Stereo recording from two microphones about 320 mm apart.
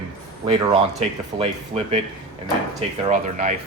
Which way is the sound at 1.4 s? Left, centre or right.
Centre.